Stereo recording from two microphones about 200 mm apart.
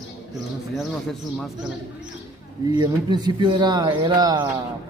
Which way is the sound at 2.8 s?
20° right (ahead or behind).